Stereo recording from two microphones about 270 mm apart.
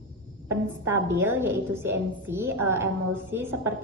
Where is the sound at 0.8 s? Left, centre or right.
Centre.